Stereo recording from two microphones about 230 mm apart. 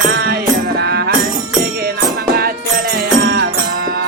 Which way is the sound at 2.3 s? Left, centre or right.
Right.